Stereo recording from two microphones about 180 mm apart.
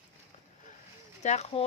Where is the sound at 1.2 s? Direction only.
40° left (ahead or behind).